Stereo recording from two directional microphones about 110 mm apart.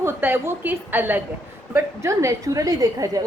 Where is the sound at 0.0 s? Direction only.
20° right (ahead or behind).